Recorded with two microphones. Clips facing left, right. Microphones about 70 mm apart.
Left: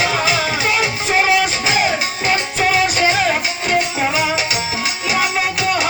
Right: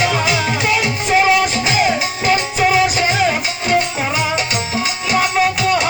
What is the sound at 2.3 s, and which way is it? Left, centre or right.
Music, centre.